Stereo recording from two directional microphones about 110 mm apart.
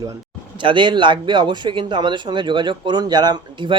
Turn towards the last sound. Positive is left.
turn(degrees=-45)  # may be behind; listen again after turning